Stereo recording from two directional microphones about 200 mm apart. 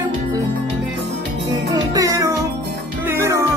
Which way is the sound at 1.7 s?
20° right (ahead or behind).